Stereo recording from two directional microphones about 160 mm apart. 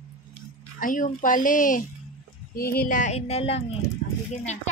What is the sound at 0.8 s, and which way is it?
Speech, 55° left (ahead or behind).